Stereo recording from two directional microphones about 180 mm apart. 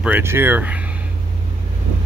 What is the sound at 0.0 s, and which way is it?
Speech, 10° right (ahead or behind).